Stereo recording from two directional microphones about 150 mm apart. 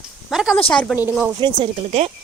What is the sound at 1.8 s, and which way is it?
Speech, 45° right (ahead or behind).